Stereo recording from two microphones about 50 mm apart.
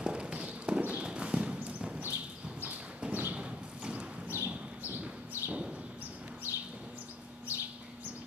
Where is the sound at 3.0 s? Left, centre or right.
Right.